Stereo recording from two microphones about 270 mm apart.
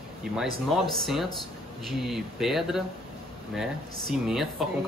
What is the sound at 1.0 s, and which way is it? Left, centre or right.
Speech, centre.